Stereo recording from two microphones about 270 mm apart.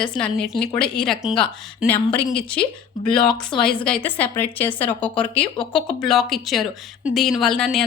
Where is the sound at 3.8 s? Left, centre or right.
Centre.